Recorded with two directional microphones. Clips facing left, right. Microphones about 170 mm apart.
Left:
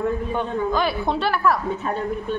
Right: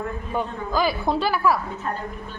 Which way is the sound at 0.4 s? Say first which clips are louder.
Right 1 dB; centre (ahead or behind).